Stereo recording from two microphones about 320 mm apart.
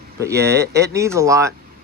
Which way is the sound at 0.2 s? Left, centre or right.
Centre.